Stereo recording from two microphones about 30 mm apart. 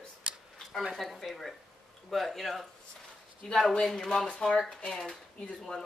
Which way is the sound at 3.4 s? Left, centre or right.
Centre.